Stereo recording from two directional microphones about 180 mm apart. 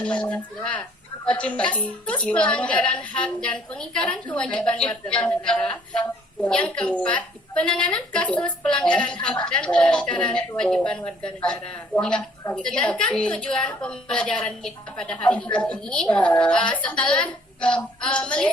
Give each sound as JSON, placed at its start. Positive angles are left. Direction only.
{"t": 0.0, "sound": "speech", "side_deg": 5}